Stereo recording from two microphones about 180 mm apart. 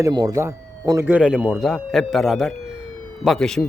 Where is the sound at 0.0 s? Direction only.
20° right (ahead or behind).